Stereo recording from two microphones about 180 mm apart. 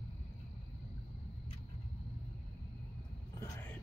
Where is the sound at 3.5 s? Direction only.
10° left (ahead or behind).